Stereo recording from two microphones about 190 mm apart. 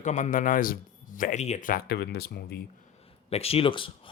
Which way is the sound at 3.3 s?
30° left (ahead or behind).